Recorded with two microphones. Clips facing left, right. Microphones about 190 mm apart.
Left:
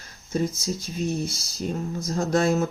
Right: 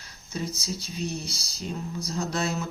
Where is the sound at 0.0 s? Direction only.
50° left (ahead or behind).